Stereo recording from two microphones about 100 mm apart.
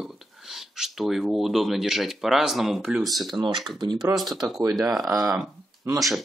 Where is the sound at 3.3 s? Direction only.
55° right (ahead or behind).